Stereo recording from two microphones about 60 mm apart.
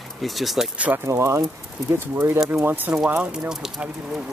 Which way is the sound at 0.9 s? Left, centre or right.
Right.